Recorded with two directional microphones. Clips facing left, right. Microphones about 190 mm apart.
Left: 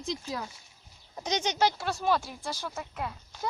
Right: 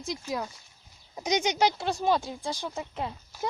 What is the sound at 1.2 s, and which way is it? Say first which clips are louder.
Speech: right 3 dB; 10° right (ahead or behind).